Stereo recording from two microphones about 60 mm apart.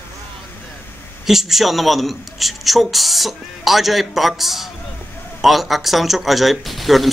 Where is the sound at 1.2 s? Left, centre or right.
Centre.